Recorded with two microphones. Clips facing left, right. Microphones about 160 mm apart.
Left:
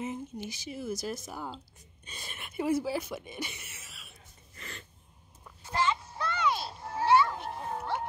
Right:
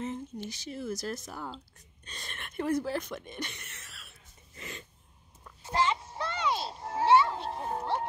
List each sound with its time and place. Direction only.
0.0 s speech: 5° left (ahead or behind)
4.6 s a sound: 15° right (ahead or behind)
5.6 s children playing: 30° right (ahead or behind)